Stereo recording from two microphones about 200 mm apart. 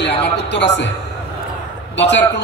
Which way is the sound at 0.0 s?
60° left (ahead or behind).